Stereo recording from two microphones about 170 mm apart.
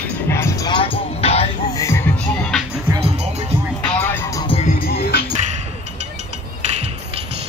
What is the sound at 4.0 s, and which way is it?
Music, 15° left (ahead or behind).